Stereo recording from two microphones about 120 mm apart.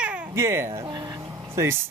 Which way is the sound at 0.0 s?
10° right (ahead or behind).